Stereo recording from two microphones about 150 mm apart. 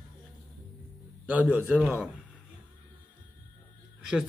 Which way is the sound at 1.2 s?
10° right (ahead or behind).